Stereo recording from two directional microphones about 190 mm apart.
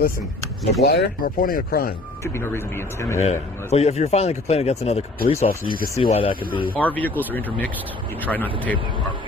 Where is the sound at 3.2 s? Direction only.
35° left (ahead or behind).